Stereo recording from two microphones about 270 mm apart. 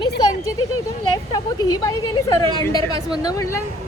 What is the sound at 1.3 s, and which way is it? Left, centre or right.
Speech, centre.